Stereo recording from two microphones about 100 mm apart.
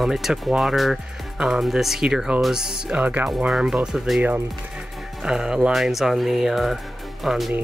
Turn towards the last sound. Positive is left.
turn(degrees=0)  # may be behind; listen again after turning